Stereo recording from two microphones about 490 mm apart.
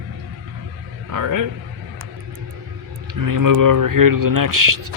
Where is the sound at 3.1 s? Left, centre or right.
Right.